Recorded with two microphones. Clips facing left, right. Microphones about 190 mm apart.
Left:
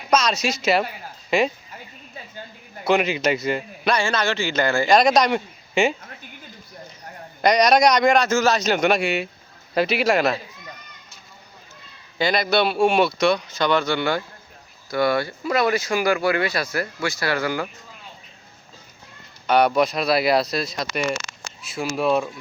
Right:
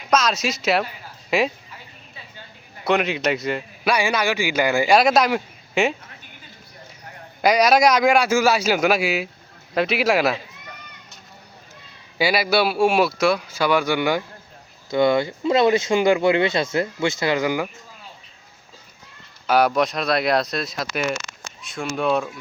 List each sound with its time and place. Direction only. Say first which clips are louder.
0.1 s a man's voice: even; centre (ahead or behind)
1.7 s a sound: left 4 dB; 45° left (ahead or behind)
2.8 s a man's voice: left 1 dB; centre (ahead or behind)
3.9 s speech: right 2 dB; 10° right (ahead or behind)
7.4 s a man's voice: even; 5° right (ahead or behind)
12.1 s speech: right 1 dB; 10° right (ahead or behind)
19.5 s a man's voice: left 1 dB; centre (ahead or behind)